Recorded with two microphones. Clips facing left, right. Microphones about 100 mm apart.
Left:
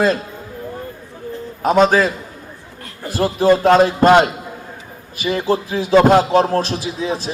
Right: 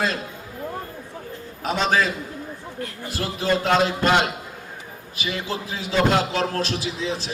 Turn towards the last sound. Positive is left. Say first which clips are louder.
# left 5 dB
turn(degrees=50)  # may be behind; listen again after turning